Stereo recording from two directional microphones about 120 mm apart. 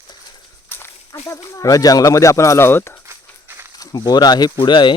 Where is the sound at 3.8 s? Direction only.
35° left (ahead or behind).